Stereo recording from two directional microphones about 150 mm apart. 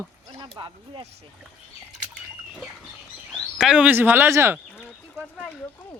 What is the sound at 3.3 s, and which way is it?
Speech, 5° right (ahead or behind).